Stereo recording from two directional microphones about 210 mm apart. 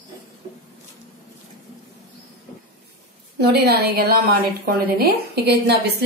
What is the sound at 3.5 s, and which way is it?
A woman's voice, 50° right (ahead or behind).